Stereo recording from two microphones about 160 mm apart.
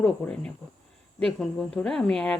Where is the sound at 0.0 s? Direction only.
5° left (ahead or behind).